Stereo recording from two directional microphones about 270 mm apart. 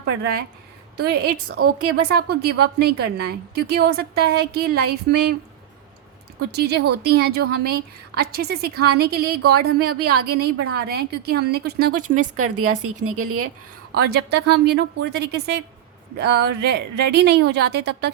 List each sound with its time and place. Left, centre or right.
0.0 s a woman's voice: right
6.5 s a woman's voice: right
12.4 s a woman's voice: right
13.9 s a woman's voice: right